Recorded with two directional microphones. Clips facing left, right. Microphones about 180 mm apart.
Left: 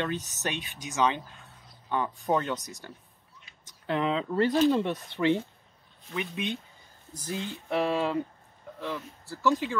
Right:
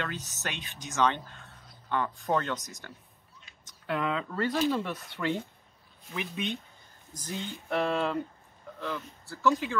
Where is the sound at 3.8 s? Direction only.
25° left (ahead or behind).